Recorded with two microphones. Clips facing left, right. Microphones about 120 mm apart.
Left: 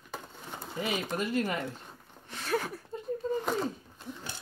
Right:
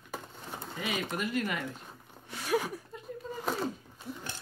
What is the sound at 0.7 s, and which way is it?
Speech, 30° left (ahead or behind).